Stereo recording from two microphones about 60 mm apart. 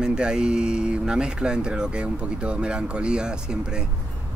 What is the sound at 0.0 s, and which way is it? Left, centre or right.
Speech, centre.